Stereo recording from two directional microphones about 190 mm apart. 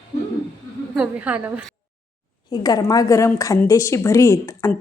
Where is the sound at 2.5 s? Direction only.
20° left (ahead or behind).